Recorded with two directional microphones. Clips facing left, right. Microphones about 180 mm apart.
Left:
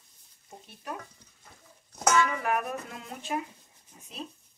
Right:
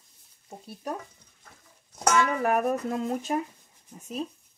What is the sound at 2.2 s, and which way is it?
Speech, 40° right (ahead or behind).